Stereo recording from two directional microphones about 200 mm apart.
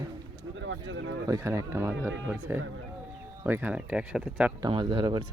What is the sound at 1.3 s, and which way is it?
Speech, 15° right (ahead or behind).